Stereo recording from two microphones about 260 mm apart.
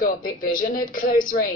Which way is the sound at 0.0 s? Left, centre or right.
Left.